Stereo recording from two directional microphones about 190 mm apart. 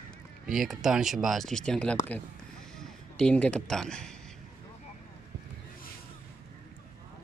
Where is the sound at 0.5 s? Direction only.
Centre (ahead or behind).